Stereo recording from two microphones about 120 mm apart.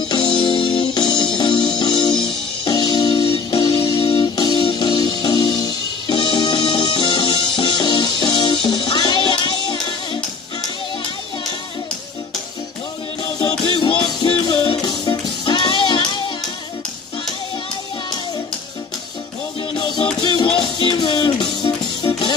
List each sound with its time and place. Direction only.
0.1 s music: 35° left (ahead or behind)
13.2 s music: 45° left (ahead or behind)
20.4 s music: 45° left (ahead or behind)